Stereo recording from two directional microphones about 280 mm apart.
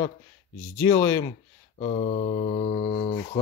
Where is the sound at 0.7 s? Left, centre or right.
Centre.